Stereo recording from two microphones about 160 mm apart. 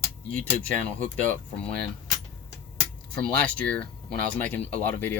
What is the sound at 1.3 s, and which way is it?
Speech, 5° left (ahead or behind).